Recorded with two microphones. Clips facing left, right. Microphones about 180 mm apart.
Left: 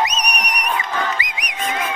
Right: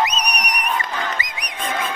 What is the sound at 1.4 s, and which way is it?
Livestock, 30° right (ahead or behind).